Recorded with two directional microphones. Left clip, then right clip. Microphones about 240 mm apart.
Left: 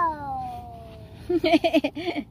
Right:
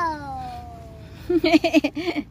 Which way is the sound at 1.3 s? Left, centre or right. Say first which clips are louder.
Right 2 dB; centre.